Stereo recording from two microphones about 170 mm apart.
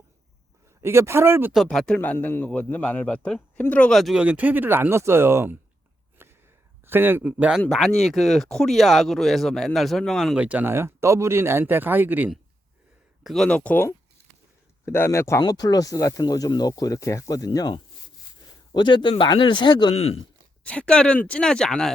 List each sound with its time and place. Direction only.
0.8 s speech: 15° right (ahead or behind)
1.5 s speech: centre (ahead or behind); by 5.5 s 15° right (ahead or behind)
6.2 s a sound: 15° right (ahead or behind)
6.8 s speech: 10° right (ahead or behind)
13.2 s speech: 5° left (ahead or behind); by 19.9 s 25° left (ahead or behind)
19.9 s speech: 35° left (ahead or behind)
20.7 s speech: 5° left (ahead or behind)